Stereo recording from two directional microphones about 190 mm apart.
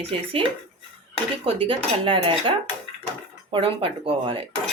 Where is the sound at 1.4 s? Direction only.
30° right (ahead or behind).